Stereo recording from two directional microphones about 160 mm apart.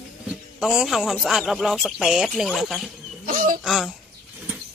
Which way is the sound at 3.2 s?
55° right (ahead or behind).